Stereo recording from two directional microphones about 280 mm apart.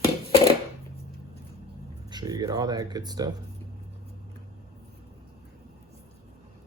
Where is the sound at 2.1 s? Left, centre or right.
Centre.